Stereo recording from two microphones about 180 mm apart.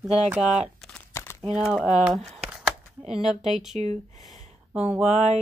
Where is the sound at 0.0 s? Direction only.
Centre (ahead or behind); by 1.4 s 15° left (ahead or behind).